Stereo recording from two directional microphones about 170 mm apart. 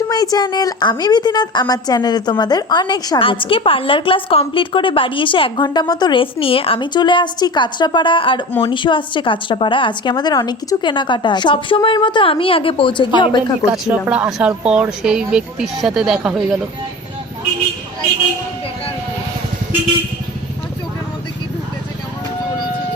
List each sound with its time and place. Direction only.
0.1 s a woman's voice: 20° left (ahead or behind)
13.7 s speech: 10° right (ahead or behind)